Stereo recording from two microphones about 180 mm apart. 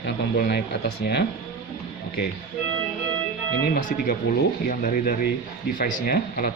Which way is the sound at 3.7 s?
50° left (ahead or behind).